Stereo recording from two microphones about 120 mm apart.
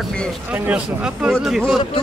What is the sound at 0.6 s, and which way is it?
Speech, 10° right (ahead or behind).